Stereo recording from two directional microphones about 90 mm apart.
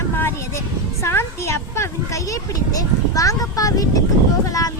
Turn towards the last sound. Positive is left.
turn(degrees=40)  # may be behind; listen again after turning